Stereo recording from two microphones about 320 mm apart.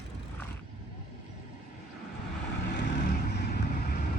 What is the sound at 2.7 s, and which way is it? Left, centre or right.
Vehicle, left.